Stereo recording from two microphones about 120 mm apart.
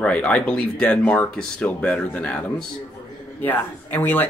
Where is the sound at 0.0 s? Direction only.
10° left (ahead or behind).